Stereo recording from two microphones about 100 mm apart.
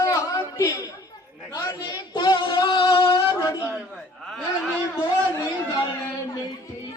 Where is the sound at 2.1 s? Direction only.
45° left (ahead or behind).